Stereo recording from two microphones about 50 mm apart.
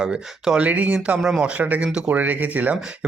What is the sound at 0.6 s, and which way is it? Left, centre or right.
Speech, right.